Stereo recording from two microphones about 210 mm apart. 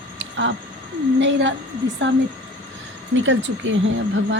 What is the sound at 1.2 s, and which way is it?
Speech, 60° right (ahead or behind).